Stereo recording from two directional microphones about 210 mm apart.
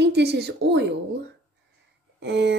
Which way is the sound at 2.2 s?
55° right (ahead or behind).